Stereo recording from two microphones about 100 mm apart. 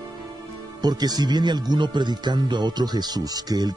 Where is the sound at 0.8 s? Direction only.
40° right (ahead or behind).